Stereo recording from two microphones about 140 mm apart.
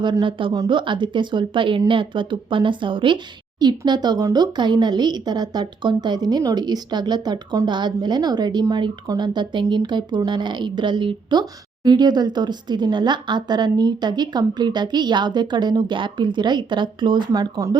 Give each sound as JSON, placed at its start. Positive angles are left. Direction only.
{"t": 0.0, "sound": "speech", "side_deg": -35}